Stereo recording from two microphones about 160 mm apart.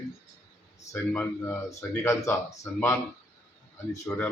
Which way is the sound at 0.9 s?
10° left (ahead or behind).